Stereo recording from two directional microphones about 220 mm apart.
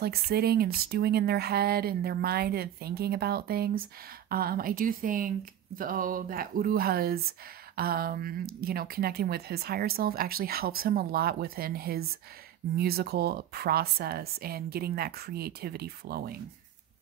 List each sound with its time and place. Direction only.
0.0 s speech: 45° right (ahead or behind)